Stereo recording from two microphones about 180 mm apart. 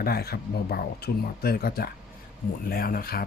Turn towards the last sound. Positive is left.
turn(degrees=55)  # may be behind; listen again after turning